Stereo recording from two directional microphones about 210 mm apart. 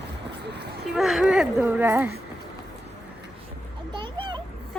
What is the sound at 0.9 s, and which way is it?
Speech, centre (ahead or behind).